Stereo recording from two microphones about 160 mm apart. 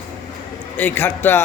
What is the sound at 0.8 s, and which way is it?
Speech, 10° left (ahead or behind).